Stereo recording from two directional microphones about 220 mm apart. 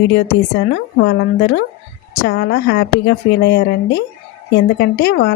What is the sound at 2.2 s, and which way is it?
Speech, 50° left (ahead or behind).